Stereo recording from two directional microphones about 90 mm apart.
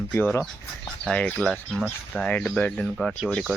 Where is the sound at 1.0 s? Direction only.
10° left (ahead or behind).